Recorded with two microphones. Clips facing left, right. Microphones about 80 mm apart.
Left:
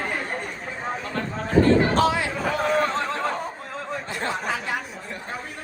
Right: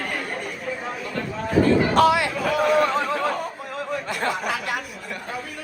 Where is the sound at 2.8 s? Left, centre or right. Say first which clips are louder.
Right 3 dB; centre.